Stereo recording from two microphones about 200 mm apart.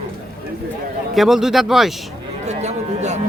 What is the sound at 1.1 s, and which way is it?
Speech, centre (ahead or behind).